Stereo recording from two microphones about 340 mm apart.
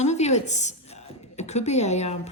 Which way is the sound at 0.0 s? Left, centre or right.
Centre.